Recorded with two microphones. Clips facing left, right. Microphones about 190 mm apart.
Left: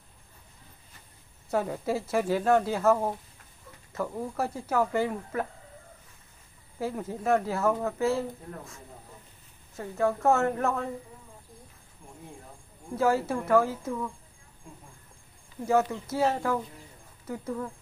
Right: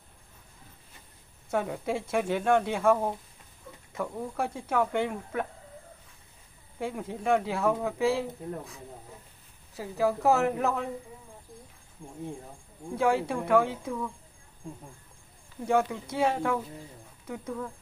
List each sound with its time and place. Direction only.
1.5 s speech: 5° left (ahead or behind)
6.8 s speech: centre (ahead or behind)
12.0 s speech: 30° right (ahead or behind)
12.9 s speech: 5° left (ahead or behind)
15.6 s speech: 5° left (ahead or behind)